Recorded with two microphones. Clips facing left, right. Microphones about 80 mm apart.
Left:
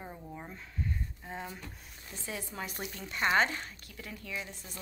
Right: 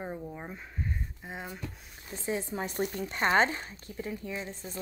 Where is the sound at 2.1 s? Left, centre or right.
Right.